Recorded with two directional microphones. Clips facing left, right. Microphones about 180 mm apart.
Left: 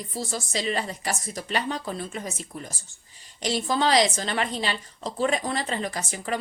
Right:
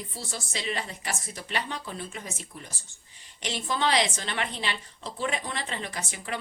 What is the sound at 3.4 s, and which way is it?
A woman's voice, 40° left (ahead or behind).